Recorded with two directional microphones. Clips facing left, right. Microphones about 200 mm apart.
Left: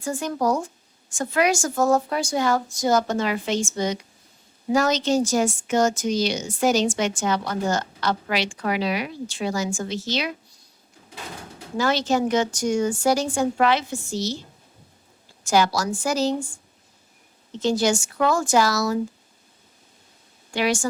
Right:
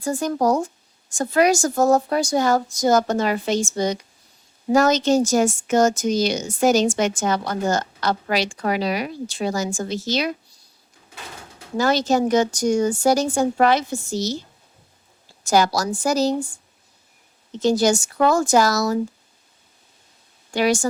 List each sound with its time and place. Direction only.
0.0 s a woman's voice: 40° right (ahead or behind)
11.8 s a woman's voice: 40° right (ahead or behind)
15.4 s a woman's voice: 40° right (ahead or behind)
17.6 s a woman's voice: 40° right (ahead or behind)
20.5 s a woman's voice: 40° right (ahead or behind)